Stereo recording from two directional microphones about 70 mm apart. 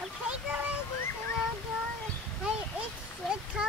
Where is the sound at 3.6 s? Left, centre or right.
Centre.